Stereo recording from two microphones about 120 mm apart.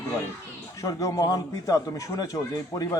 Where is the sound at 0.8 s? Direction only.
25° left (ahead or behind).